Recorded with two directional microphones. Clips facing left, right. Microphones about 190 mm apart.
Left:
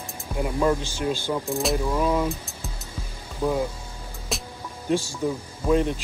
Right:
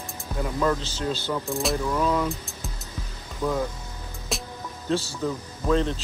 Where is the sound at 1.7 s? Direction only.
15° left (ahead or behind).